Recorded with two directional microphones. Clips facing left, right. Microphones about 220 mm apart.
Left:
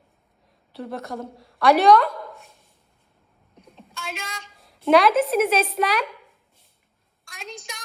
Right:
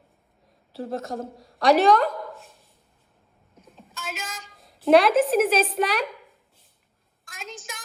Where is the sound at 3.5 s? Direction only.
Centre (ahead or behind).